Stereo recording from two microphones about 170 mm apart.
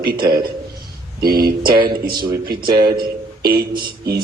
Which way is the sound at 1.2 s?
65° right (ahead or behind).